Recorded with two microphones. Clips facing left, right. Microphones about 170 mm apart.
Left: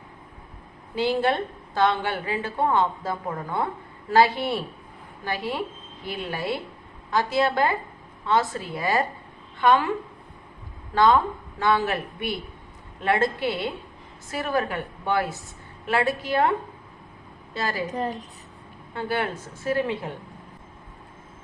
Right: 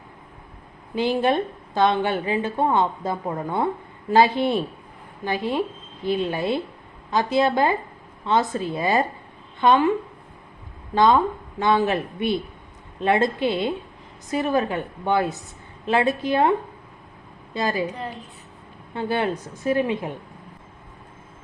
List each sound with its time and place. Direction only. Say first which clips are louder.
0.9 s a woman's voice: right 2 dB; 20° right (ahead or behind)
10.9 s a woman's voice: right 2 dB; 20° right (ahead or behind)
17.9 s a woman's voice: left 5 dB; 40° left (ahead or behind)
18.9 s a woman's voice: right 3 dB; 20° right (ahead or behind)